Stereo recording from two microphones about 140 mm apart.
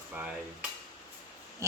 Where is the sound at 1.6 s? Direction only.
20° right (ahead or behind).